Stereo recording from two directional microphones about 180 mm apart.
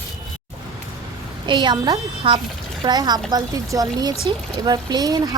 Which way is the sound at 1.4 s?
25° right (ahead or behind).